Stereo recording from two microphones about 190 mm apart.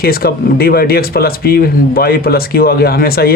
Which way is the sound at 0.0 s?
55° left (ahead or behind).